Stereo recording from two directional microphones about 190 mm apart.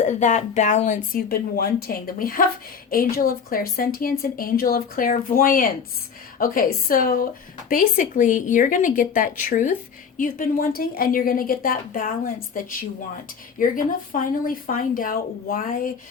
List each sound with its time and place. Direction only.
0.0 s speech: 40° left (ahead or behind)
13.6 s speech: 45° left (ahead or behind)